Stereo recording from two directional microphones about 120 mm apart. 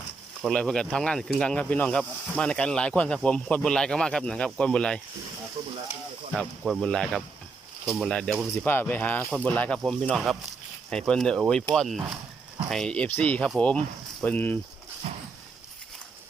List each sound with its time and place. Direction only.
0.4 s speech: 5° left (ahead or behind)
5.6 s frying: 60° right (ahead or behind)
6.4 s speech: centre (ahead or behind)
8.6 s speech: 15° left (ahead or behind)